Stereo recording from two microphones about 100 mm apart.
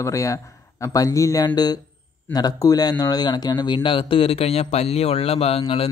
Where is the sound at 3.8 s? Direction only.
60° left (ahead or behind); by 5.6 s 90° left.